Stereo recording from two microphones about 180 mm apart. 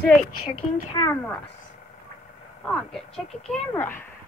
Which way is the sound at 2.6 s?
Centre (ahead or behind).